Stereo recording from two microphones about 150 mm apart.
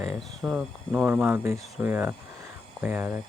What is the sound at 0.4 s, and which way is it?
Speech, 10° right (ahead or behind).